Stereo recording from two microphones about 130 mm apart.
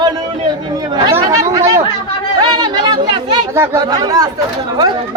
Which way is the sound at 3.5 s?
20° right (ahead or behind).